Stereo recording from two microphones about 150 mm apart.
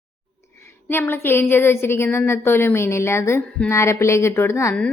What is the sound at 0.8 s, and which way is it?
A woman's voice, 15° left (ahead or behind).